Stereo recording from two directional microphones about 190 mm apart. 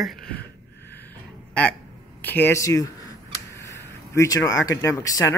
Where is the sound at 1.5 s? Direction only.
5° left (ahead or behind).